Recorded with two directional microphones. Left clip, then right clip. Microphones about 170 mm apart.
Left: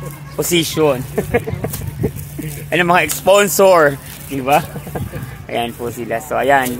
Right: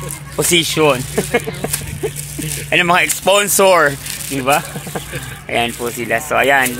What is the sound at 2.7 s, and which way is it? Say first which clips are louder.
Speech: right 1 dB; 15° right (ahead or behind).